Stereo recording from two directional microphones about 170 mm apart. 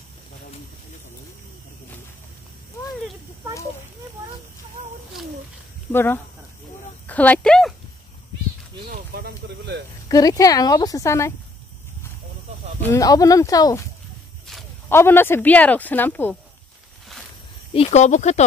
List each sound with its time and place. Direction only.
5.9 s speech: 10° left (ahead or behind)
8.9 s speech: 65° right (ahead or behind)
10.0 s a woman's voice: 20° left (ahead or behind)
12.8 s a woman's voice: 20° left (ahead or behind)
14.5 s walk: centre (ahead or behind)
14.9 s speech: 15° left (ahead or behind)
17.7 s speech: 40° left (ahead or behind)